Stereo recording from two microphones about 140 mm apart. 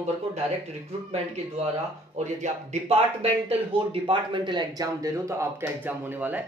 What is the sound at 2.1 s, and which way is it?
Speech, 55° right (ahead or behind).